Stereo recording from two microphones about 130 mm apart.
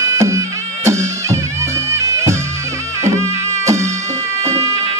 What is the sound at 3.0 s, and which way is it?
Music, 20° right (ahead or behind).